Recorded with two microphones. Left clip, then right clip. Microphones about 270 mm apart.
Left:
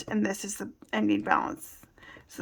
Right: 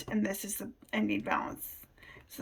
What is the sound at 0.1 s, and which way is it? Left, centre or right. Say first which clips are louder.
Speech: left 4 dB; centre.